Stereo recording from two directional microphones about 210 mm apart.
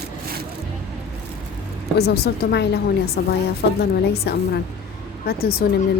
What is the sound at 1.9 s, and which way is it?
Speech, 50° left (ahead or behind).